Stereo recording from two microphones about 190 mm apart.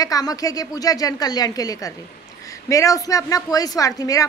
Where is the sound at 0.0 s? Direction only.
20° left (ahead or behind).